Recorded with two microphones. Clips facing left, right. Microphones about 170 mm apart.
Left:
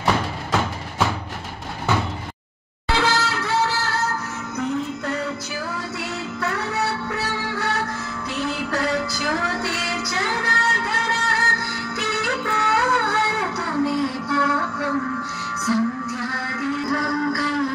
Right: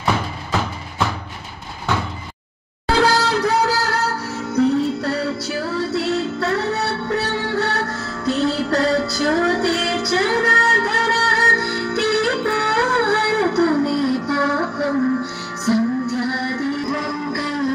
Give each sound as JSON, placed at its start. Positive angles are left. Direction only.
{"t": 0.0, "sound": "music", "side_deg": 0}
{"t": 2.9, "sound": "music", "side_deg": -40}